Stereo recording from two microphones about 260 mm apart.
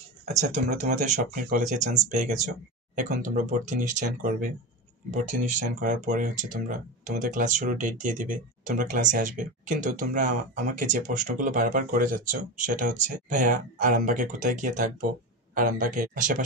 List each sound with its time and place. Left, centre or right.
0.7 s speech: right